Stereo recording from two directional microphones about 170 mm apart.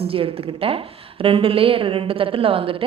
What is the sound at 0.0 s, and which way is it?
A woman's voice, 35° right (ahead or behind).